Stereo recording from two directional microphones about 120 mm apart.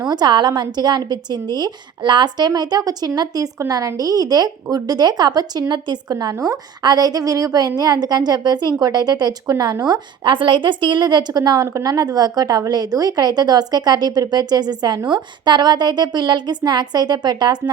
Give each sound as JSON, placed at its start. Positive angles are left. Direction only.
{"t": 0.1, "sound": "a woman's voice", "side_deg": -35}